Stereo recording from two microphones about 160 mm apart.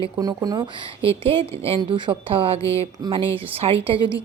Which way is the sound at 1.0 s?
35° right (ahead or behind).